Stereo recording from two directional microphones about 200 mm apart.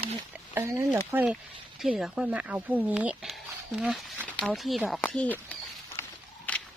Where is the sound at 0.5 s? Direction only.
15° right (ahead or behind); by 5.5 s 5° left (ahead or behind).